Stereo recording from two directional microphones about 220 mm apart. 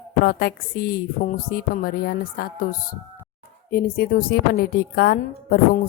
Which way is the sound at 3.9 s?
45° left (ahead or behind).